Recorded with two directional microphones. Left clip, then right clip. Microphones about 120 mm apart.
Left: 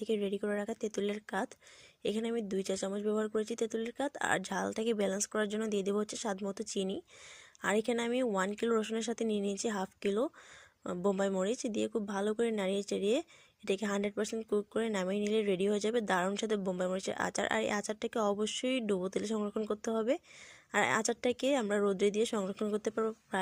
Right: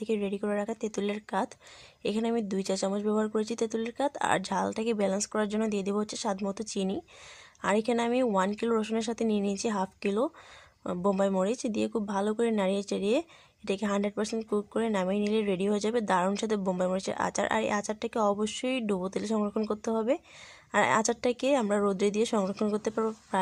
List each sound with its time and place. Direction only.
0.0 s speech: 20° left (ahead or behind)
19.5 s speech: 10° left (ahead or behind)
19.8 s speech: 20° left (ahead or behind)